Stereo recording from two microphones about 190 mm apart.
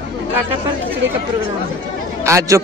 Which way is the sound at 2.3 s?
15° right (ahead or behind).